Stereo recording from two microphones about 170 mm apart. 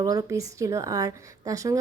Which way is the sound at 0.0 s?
20° right (ahead or behind).